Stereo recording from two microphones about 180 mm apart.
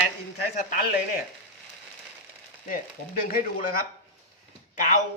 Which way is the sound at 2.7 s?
55° left (ahead or behind).